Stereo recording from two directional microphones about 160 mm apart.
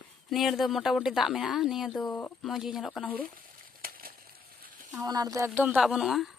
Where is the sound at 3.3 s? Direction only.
65° right (ahead or behind).